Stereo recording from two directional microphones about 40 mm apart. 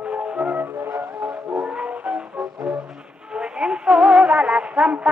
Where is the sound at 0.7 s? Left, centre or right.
Right.